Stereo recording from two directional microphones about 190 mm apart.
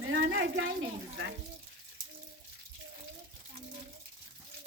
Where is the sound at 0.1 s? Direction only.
75° right (ahead or behind).